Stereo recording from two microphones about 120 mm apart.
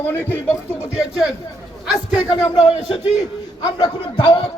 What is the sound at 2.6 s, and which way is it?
Speech, 55° left (ahead or behind).